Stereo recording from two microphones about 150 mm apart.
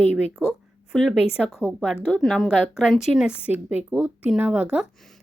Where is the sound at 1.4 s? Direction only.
5° left (ahead or behind).